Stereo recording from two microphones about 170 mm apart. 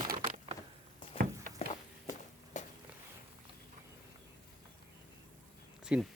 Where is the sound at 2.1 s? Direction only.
45° left (ahead or behind).